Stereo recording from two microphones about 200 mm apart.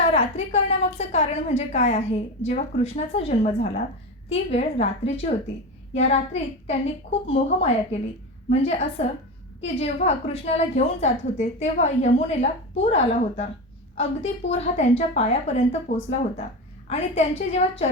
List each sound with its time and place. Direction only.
0.1 s a woman's voice: 35° left (ahead or behind)
16.9 s a woman's voice: 30° left (ahead or behind)